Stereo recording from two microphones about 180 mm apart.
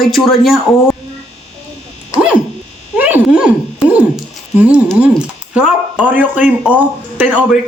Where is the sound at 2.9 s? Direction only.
10° right (ahead or behind).